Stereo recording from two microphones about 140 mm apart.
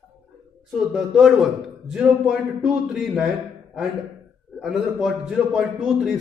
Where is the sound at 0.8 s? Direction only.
5° right (ahead or behind).